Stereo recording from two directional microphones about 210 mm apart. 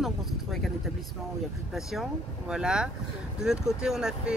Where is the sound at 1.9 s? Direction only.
Centre (ahead or behind).